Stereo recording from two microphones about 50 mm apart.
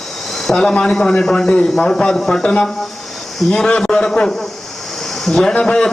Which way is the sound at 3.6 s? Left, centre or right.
Left.